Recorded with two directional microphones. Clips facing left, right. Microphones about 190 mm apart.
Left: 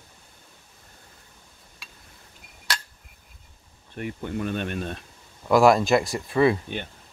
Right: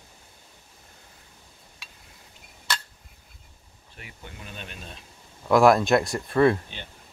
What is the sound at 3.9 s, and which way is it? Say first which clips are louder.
Speech: left 15 dB; 50° left (ahead or behind).